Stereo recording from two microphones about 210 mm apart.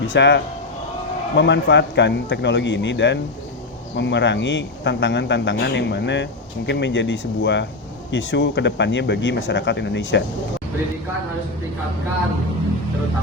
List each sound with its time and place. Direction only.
0.1 s speech: 55° left (ahead or behind)